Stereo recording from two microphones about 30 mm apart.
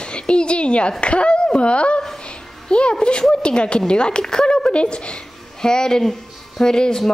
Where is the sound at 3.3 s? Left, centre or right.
Left.